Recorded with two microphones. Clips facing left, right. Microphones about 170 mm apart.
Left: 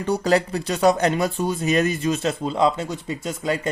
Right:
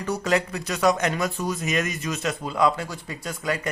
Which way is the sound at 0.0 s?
30° left (ahead or behind).